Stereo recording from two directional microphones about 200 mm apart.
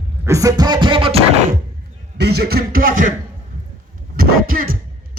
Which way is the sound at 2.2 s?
55° right (ahead or behind).